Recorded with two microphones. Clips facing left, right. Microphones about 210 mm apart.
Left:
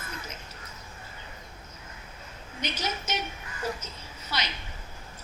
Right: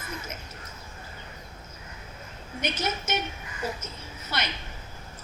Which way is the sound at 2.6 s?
50° right (ahead or behind).